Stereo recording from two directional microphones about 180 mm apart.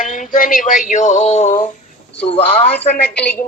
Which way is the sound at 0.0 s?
45° left (ahead or behind).